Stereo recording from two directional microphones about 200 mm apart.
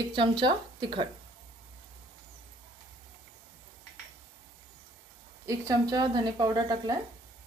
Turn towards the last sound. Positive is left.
turn(degrees=-20)  # may be behind; listen again after turning